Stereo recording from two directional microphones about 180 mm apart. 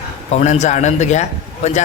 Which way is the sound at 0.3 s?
40° left (ahead or behind).